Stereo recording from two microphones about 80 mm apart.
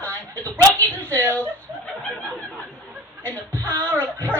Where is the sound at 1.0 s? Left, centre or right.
Left.